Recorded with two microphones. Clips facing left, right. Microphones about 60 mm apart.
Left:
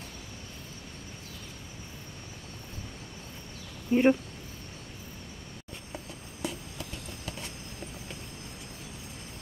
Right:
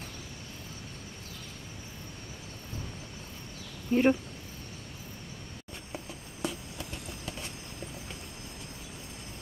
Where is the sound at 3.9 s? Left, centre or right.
Centre.